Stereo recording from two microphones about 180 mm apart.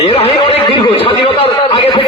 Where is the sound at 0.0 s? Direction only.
30° left (ahead or behind).